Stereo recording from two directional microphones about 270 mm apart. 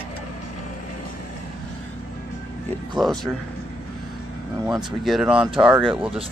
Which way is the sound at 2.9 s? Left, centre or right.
Centre.